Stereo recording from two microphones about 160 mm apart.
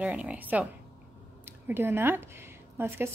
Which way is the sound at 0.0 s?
10° right (ahead or behind).